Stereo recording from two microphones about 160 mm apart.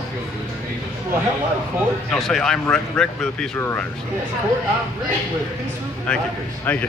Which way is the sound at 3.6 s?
15° left (ahead or behind).